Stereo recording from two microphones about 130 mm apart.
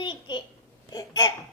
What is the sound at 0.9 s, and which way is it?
Speech, 30° left (ahead or behind).